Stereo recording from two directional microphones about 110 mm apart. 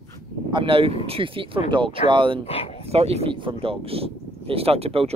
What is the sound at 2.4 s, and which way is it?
Speech, 65° left (ahead or behind).